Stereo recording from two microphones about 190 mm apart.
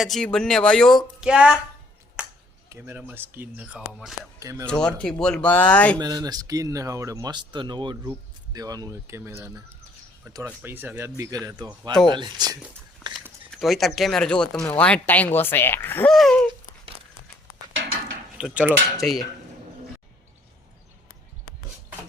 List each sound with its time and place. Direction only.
0.0 s speech: centre (ahead or behind)
2.6 s speech: 10° right (ahead or behind)
4.4 s speech: 15° right (ahead or behind)
4.9 s speech: 5° left (ahead or behind)
6.0 s speech: 20° right (ahead or behind)
13.5 s speech: centre (ahead or behind)
18.3 s speech: 5° right (ahead or behind)